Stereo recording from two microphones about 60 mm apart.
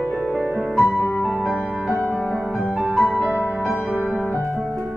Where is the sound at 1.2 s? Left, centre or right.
Centre.